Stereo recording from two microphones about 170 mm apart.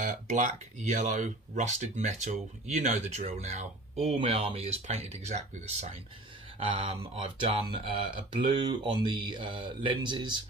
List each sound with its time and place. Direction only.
0.0 s speech: 45° right (ahead or behind); by 10.4 s 30° right (ahead or behind)